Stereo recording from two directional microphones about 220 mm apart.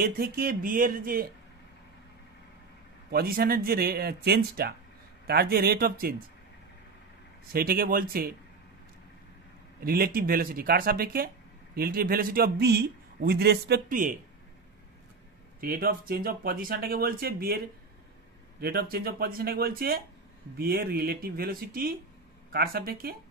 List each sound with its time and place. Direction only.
0.0 s speech: 40° right (ahead or behind)
3.1 s a man's voice: 45° right (ahead or behind)
7.5 s a man's voice: 45° right (ahead or behind)
9.8 s a man's voice: 40° right (ahead or behind)
15.6 s a man's voice: 45° right (ahead or behind)
18.6 s a man's voice: 45° right (ahead or behind)